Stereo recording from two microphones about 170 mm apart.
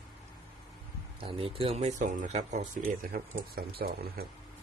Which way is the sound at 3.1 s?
60° right (ahead or behind).